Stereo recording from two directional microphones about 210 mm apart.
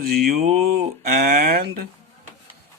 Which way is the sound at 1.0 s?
40° right (ahead or behind).